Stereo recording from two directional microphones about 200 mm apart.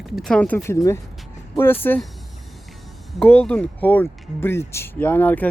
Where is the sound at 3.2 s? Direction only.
5° left (ahead or behind).